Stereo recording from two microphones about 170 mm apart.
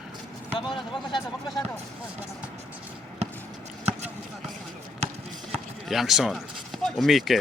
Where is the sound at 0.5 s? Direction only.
30° left (ahead or behind).